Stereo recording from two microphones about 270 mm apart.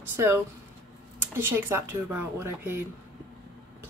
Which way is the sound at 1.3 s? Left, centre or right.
Centre.